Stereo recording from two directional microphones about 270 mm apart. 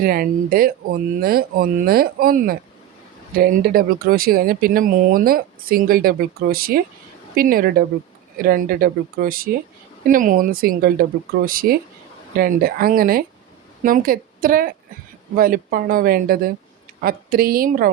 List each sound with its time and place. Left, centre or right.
0.0 s speech: right